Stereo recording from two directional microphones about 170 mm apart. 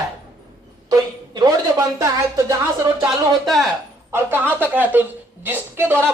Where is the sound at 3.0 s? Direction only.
Centre (ahead or behind).